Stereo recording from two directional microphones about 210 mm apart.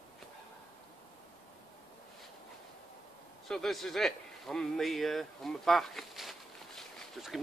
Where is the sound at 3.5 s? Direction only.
Centre (ahead or behind).